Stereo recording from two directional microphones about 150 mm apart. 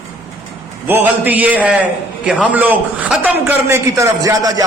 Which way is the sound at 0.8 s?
10° right (ahead or behind).